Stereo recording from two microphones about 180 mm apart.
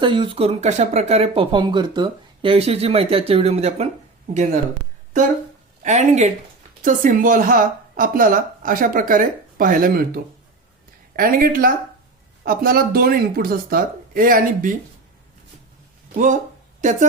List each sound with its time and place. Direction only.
0.0 s speech: 25° right (ahead or behind)
5.8 s speech: 40° right (ahead or behind)
11.2 s speech: 50° right (ahead or behind)
16.1 s speech: 45° right (ahead or behind)